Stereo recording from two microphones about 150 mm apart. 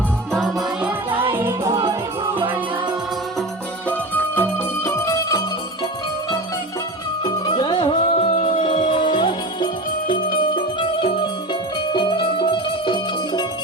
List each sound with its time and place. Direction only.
0.3 s music: centre (ahead or behind)
1.1 s music: 35° right (ahead or behind)
1.4 s music: 20° right (ahead or behind)
3.8 s music: 10° left (ahead or behind)
7.3 s music: 30° left (ahead or behind)